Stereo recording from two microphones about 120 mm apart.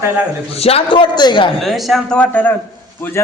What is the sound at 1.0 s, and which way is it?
Speech, 40° left (ahead or behind).